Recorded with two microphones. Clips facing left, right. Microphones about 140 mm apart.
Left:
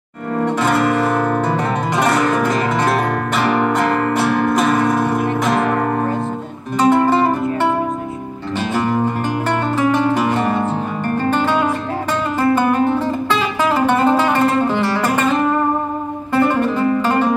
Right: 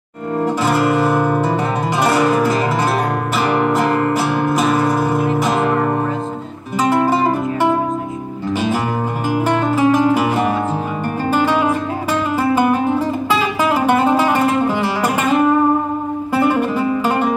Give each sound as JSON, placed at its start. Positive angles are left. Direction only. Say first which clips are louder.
{"t": 0.6, "sound": "music", "louder": "even", "side_deg": -5}
{"t": 6.8, "sound": "music", "louder": "left 2 dB", "side_deg": -5}
{"t": 8.5, "sound": "music", "louder": "left 2 dB", "side_deg": -10}
{"t": 16.3, "sound": "music", "louder": "left 1 dB", "side_deg": -10}